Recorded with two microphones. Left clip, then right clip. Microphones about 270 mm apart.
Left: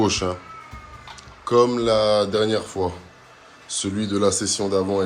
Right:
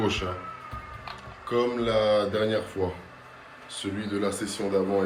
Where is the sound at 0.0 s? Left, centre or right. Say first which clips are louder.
Left 6 dB; centre.